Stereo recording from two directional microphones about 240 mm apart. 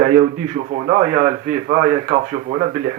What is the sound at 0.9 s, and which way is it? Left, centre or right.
Speech, right.